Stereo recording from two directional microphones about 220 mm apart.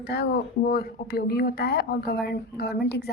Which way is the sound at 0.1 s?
45° left (ahead or behind).